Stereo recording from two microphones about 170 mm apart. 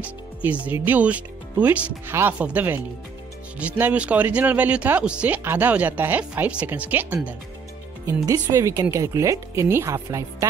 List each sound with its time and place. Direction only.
0.0 s speech: 10° right (ahead or behind)